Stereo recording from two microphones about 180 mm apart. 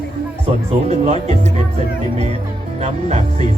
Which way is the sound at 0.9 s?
35° right (ahead or behind).